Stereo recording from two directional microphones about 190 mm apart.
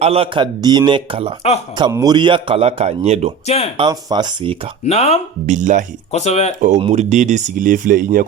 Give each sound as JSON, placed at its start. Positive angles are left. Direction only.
{"t": 0.0, "sound": "a man's voice", "side_deg": -30}
{"t": 3.4, "sound": "speech", "side_deg": 35}
{"t": 3.8, "sound": "a man's voice", "side_deg": -20}
{"t": 4.9, "sound": "speech", "side_deg": 35}
{"t": 5.5, "sound": "speech", "side_deg": -40}
{"t": 6.1, "sound": "speech", "side_deg": 35}
{"t": 6.6, "sound": "speech", "side_deg": -40}